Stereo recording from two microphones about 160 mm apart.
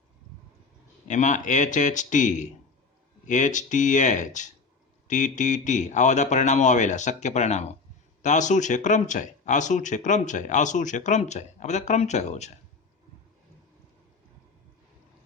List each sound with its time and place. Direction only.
1.0 s speech: 50° left (ahead or behind)